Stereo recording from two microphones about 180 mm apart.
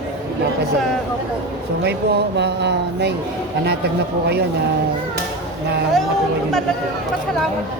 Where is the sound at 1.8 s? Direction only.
65° right (ahead or behind).